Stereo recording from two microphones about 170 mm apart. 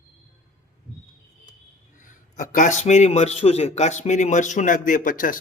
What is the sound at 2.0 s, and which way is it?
A man's voice, 50° left (ahead or behind).